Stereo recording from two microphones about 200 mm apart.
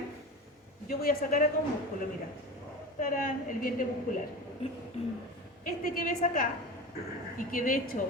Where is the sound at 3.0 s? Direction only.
45° left (ahead or behind).